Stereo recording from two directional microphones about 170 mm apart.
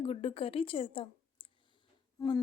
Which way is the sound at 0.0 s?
35° left (ahead or behind).